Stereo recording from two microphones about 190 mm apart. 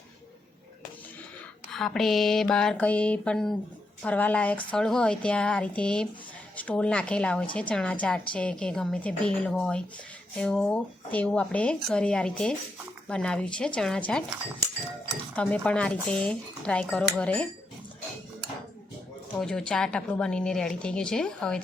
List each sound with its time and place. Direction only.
1.7 s speech: centre (ahead or behind)
15.4 s speech: 5° left (ahead or behind)
19.3 s speech: 5° left (ahead or behind)